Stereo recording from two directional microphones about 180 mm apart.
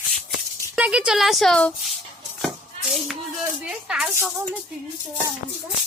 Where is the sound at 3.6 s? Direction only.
5° right (ahead or behind).